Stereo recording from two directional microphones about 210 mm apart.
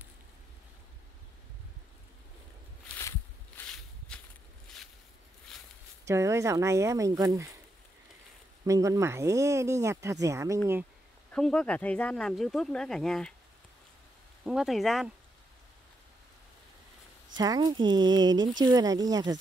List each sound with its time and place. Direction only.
3.0 s a sound: 10° left (ahead or behind)
6.0 s speech: 15° right (ahead or behind)
8.6 s speech: 15° right (ahead or behind)
11.3 s speech: 5° left (ahead or behind)
14.4 s speech: centre (ahead or behind)
17.4 s speech: 20° right (ahead or behind)